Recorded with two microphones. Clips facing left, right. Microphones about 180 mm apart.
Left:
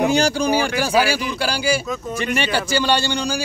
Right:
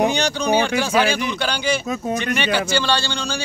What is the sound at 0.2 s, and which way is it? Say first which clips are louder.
Speech: left 1 dB; 10° left (ahead or behind).